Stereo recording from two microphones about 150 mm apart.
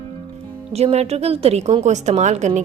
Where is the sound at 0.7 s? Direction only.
45° right (ahead or behind).